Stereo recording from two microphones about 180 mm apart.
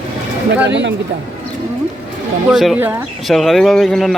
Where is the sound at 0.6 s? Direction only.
80° right.